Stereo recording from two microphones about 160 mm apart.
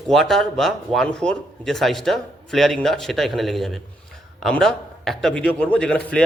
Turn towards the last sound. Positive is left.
turn(degrees=5)  # may be behind; listen again after turning